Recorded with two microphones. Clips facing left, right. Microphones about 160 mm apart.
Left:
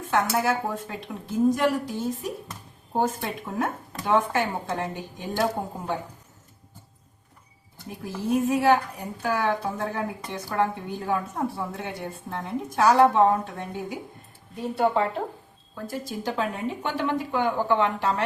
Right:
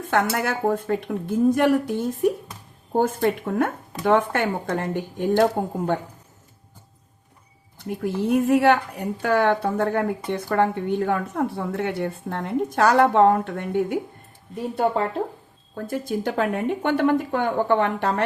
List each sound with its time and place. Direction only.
0.1 s a woman's voice: 65° right (ahead or behind)
0.7 s a woman's voice: 55° right (ahead or behind)
7.9 s a woman's voice: 65° right (ahead or behind)
15.7 s a woman's voice: 55° right (ahead or behind)